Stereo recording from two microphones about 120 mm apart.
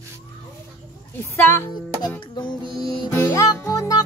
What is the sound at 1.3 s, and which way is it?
Music, 20° left (ahead or behind).